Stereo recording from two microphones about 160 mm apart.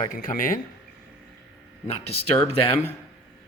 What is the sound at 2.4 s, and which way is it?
Speech, 15° right (ahead or behind).